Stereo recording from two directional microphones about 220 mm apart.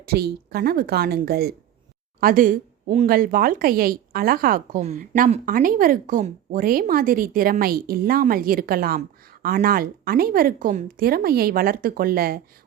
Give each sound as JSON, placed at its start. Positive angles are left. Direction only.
{"t": 0.0, "sound": "a woman's voice", "side_deg": -45}